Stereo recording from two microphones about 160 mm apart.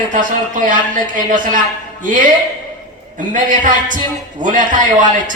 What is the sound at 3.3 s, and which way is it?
A woman's voice, 50° right (ahead or behind).